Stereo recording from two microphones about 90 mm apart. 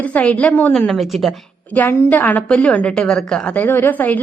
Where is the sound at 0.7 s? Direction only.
5° left (ahead or behind).